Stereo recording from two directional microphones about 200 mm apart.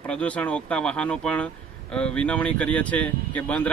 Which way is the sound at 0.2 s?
5° left (ahead or behind).